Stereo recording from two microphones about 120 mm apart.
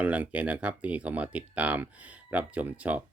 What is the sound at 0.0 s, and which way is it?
Speech, 10° right (ahead or behind).